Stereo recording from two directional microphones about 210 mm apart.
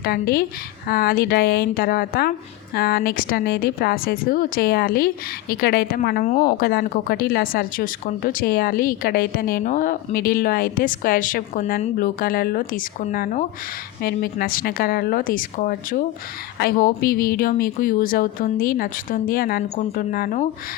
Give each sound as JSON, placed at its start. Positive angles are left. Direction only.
{"t": 0.0, "sound": "a woman's voice", "side_deg": 45}